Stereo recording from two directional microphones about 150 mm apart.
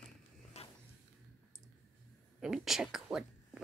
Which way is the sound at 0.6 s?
45° left (ahead or behind).